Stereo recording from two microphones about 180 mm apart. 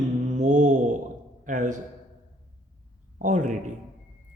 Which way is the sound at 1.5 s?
45° right (ahead or behind).